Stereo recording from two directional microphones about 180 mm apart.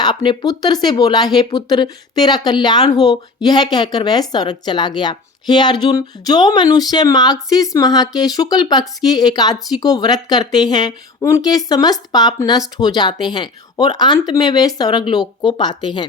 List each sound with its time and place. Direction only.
0.0 s speech: 25° left (ahead or behind)